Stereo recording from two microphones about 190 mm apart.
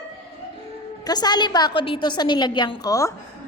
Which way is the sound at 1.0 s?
20° left (ahead or behind).